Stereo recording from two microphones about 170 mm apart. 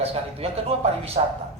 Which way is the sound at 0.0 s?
35° right (ahead or behind).